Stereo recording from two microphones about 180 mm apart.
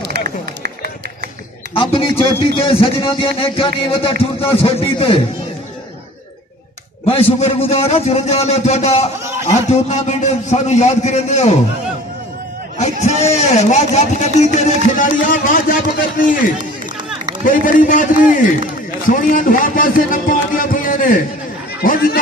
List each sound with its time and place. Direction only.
0.1 s run: 70° right (ahead or behind)
1.8 s a man's voice: 30° left (ahead or behind)
7.3 s a man's voice: 35° left (ahead or behind)
12.7 s a man's voice: 40° left (ahead or behind)
17.5 s a man's voice: 50° left (ahead or behind)